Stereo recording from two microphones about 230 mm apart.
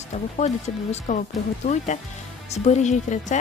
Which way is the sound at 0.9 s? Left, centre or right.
Left.